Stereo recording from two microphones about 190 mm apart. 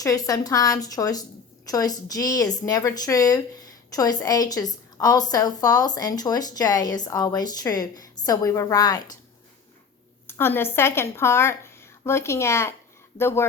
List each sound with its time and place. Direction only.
0.0 s a woman's voice: 20° left (ahead or behind)
10.2 s a woman's voice: 10° left (ahead or behind)